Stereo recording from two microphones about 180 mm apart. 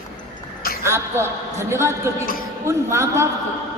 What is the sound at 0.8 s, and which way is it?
A woman's voice, 15° right (ahead or behind).